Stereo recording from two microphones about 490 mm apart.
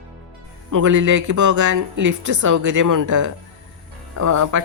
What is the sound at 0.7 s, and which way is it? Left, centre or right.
Speech, right.